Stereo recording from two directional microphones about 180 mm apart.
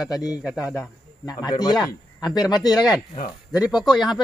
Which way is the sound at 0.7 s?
20° left (ahead or behind).